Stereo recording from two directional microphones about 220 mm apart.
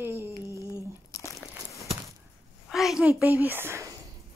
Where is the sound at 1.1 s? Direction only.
15° left (ahead or behind).